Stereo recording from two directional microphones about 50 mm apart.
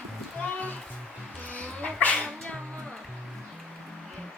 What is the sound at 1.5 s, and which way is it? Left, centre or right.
Dog, left.